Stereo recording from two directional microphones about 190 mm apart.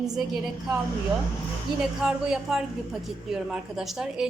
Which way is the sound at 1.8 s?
Centre (ahead or behind).